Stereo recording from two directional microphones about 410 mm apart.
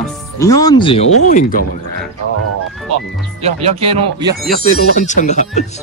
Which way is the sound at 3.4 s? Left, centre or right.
Centre.